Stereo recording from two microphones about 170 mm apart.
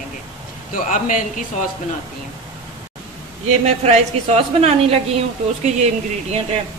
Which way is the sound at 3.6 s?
40° right (ahead or behind).